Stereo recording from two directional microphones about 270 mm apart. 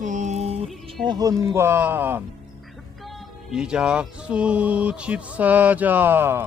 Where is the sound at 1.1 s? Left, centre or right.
Centre.